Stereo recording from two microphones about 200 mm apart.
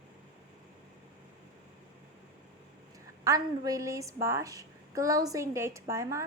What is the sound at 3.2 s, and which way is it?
A woman's voice, 20° right (ahead or behind).